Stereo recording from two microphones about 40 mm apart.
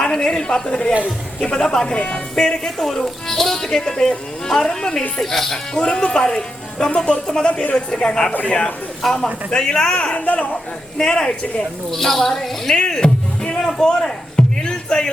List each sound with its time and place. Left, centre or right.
0.0 s a woman's voice: centre
1.9 s speech: left
5.2 s speech: centre
5.7 s a man's voice: left
9.0 s a man's voice: centre
10.2 s speech: left
10.9 s a man's voice: left
11.9 s speech: centre
12.9 s music: left
13.8 s a sound: centre